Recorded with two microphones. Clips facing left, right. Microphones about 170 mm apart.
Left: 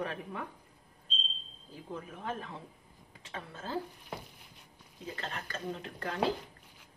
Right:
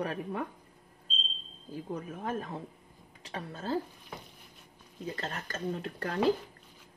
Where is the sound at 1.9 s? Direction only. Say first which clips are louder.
Right 3 dB; 40° right (ahead or behind).